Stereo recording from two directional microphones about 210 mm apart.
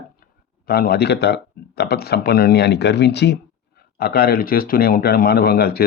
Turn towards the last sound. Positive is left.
turn(degrees=45)  # may be behind; listen again after turning